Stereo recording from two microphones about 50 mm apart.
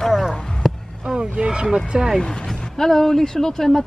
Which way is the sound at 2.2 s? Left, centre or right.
Centre.